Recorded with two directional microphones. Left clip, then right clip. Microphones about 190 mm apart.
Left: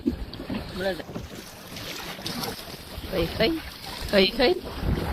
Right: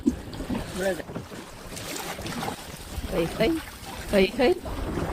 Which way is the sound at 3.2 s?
Centre (ahead or behind).